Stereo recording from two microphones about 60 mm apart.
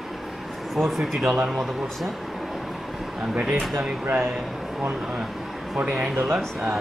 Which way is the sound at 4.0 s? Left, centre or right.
Right.